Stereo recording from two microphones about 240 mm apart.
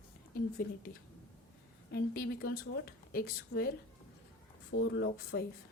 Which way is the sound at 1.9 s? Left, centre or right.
Left.